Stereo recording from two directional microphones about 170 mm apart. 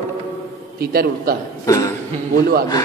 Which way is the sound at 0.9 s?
65° right (ahead or behind).